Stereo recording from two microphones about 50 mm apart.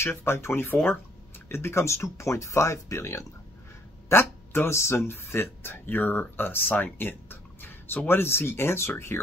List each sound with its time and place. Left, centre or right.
0.0 s speech: left
2.1 s speech: left
4.1 s speech: left